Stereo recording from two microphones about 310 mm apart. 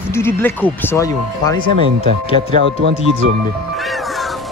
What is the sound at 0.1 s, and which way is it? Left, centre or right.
Speech, centre.